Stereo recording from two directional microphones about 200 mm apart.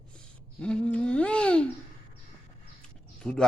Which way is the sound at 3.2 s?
5° left (ahead or behind).